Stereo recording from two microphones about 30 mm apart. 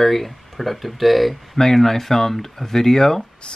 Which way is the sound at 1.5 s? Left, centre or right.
Centre.